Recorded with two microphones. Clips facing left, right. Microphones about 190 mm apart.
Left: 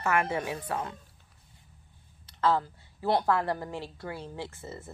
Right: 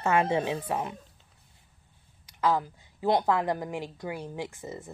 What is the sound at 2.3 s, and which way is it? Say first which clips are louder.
A woman's voice: even; 15° right (ahead or behind).